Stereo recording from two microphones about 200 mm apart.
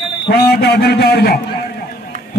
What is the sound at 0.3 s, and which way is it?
A man's voice, 55° left (ahead or behind).